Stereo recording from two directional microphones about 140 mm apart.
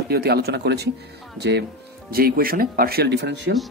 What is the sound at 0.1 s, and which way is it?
Speech, 90° right.